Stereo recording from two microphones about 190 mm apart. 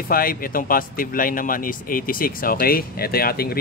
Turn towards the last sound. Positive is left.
turn(degrees=55)  # may be behind; listen again after turning